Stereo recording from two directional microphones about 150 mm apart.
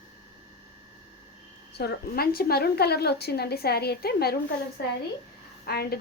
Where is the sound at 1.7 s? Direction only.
90° left.